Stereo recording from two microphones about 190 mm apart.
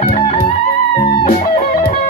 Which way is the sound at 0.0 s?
30° left (ahead or behind).